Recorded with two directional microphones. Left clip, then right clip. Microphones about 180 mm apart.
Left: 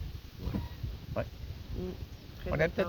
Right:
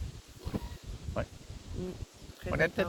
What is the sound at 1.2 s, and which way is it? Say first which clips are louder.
Speech: left 1 dB; 10° left (ahead or behind).